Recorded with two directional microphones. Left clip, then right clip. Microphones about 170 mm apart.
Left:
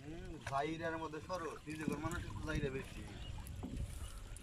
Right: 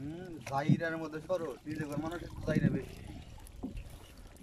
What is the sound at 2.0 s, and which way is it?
Speech, 55° right (ahead or behind).